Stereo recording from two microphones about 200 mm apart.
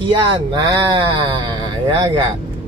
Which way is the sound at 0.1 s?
20° right (ahead or behind).